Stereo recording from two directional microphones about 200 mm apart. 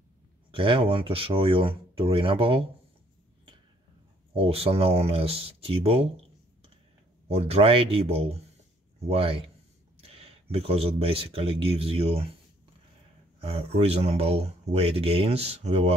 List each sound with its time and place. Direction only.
0.5 s speech: 25° right (ahead or behind)
4.3 s speech: 30° right (ahead or behind)
7.2 s speech: 30° right (ahead or behind)
13.4 s speech: 30° right (ahead or behind)